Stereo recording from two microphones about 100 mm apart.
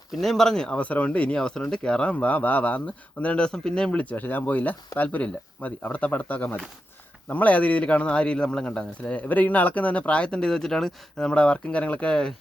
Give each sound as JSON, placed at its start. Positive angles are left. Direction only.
{"t": 0.2, "sound": "speech", "side_deg": 0}